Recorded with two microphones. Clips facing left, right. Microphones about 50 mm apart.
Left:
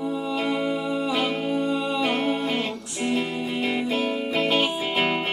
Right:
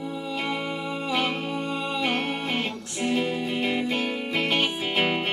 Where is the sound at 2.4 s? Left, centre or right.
Centre.